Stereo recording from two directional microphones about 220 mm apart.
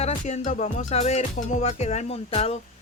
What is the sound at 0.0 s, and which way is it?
Music, 30° left (ahead or behind).